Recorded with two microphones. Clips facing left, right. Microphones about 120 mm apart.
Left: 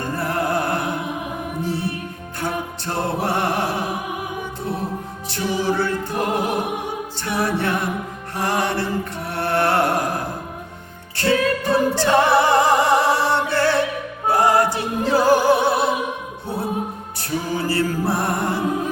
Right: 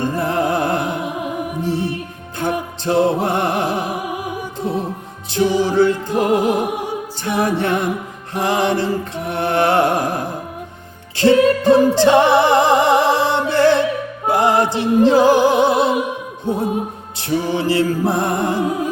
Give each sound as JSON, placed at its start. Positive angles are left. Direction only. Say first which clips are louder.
{"t": 0.0, "sound": "music", "louder": "right 4 dB", "side_deg": -20}
{"t": 5.3, "sound": "music", "louder": "right 6 dB", "side_deg": -20}
{"t": 8.4, "sound": "mantra", "louder": "right 4 dB", "side_deg": -20}
{"t": 11.2, "sound": "music", "louder": "right 7 dB", "side_deg": -20}